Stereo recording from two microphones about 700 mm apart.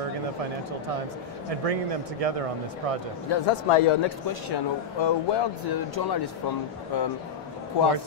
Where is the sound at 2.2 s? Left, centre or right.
Right.